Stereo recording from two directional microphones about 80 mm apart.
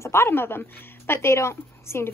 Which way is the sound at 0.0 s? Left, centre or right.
Left.